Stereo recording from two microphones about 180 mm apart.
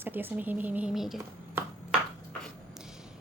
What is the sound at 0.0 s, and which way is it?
Speech, 10° right (ahead or behind).